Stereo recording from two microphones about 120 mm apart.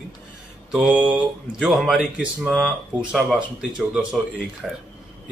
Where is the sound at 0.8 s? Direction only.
10° right (ahead or behind).